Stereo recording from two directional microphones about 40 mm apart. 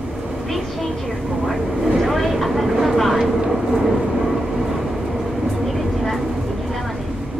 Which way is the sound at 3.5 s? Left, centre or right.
Centre.